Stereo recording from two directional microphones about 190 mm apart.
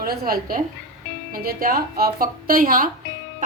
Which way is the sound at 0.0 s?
50° right (ahead or behind).